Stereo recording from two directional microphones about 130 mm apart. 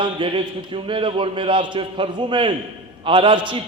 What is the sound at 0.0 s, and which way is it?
A man's voice, 40° right (ahead or behind).